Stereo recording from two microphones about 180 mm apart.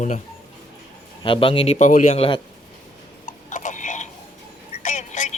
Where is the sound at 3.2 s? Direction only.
45° left (ahead or behind).